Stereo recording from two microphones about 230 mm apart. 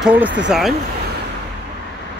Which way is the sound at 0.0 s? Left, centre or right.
Centre.